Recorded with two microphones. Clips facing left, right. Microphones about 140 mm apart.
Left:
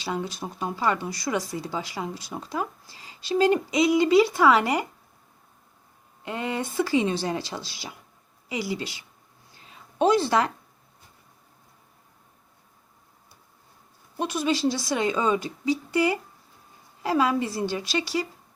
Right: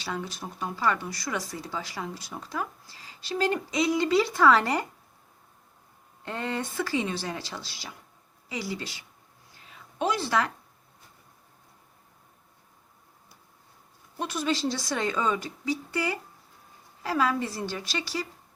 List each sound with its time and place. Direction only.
0.0 s speech: 20° left (ahead or behind)
6.2 s speech: 10° left (ahead or behind)
9.6 s a sound: 25° left (ahead or behind)
14.2 s speech: 15° left (ahead or behind)